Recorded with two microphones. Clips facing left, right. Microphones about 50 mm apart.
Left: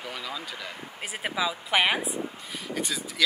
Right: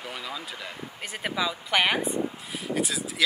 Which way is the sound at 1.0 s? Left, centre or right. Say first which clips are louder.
Even; centre.